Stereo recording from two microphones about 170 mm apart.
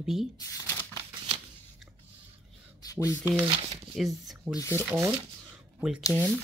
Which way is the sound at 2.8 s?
20° left (ahead or behind).